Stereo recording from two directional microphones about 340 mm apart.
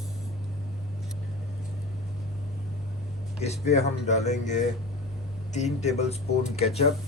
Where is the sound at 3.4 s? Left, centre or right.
Centre.